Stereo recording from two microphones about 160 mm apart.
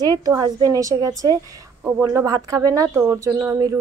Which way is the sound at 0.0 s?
25° right (ahead or behind).